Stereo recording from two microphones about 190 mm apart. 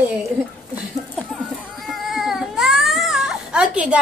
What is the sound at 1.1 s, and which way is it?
Cat, centre (ahead or behind).